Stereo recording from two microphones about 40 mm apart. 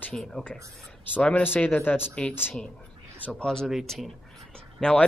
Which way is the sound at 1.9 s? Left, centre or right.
Left.